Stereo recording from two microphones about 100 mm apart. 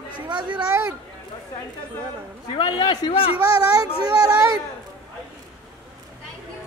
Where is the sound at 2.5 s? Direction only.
45° left (ahead or behind); by 3.6 s 65° left (ahead or behind).